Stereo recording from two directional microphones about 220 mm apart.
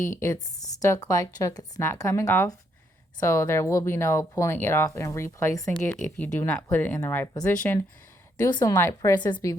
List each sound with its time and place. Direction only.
0.2 s speech: 15° left (ahead or behind)